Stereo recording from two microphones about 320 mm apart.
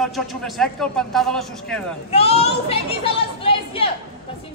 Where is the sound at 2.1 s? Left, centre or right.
Centre.